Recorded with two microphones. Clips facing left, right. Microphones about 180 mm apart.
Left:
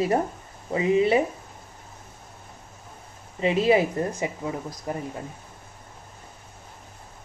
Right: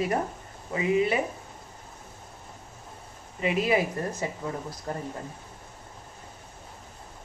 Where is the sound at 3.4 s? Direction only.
30° left (ahead or behind); by 5.0 s 15° left (ahead or behind).